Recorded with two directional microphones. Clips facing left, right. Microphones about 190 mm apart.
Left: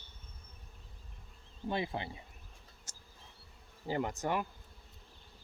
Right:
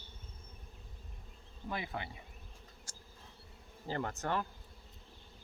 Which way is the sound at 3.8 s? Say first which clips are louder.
Left 3 dB; 15° left (ahead or behind).